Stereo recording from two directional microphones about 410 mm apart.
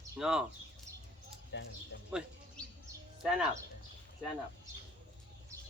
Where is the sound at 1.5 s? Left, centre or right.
Left.